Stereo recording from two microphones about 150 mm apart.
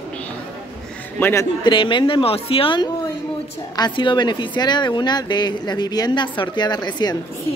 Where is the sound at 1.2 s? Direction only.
20° left (ahead or behind).